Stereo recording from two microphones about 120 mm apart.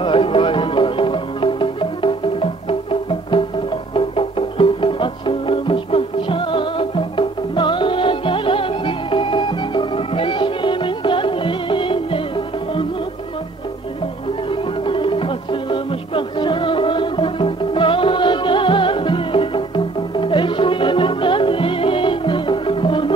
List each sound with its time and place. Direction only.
0.0 s music: 50° left (ahead or behind)
14.5 s music: 45° left (ahead or behind)